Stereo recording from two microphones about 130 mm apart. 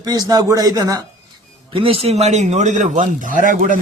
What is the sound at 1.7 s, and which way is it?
A man's voice, 45° right (ahead or behind).